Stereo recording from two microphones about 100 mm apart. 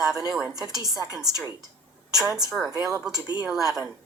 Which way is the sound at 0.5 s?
40° right (ahead or behind).